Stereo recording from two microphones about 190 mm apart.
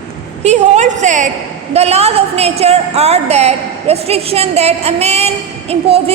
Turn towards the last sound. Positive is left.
turn(degrees=-30)  # may be behind; listen again after turning